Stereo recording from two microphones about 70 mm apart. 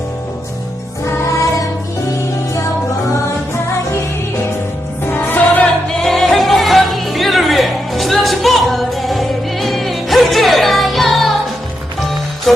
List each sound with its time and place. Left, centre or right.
1.0 s music: left
5.1 s music: left
6.0 s music: centre
12.5 s music: centre